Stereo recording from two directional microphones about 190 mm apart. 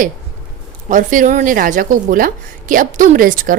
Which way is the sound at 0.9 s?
40° right (ahead or behind).